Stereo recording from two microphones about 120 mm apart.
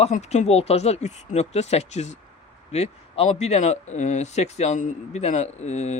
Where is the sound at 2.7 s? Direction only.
60° left (ahead or behind).